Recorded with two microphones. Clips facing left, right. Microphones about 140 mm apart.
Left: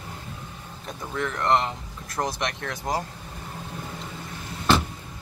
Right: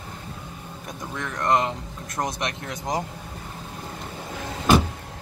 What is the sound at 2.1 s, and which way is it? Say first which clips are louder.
Speech: even; 20° right (ahead or behind).